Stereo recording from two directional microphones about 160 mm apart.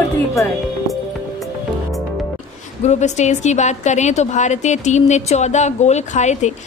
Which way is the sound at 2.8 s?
45° left (ahead or behind).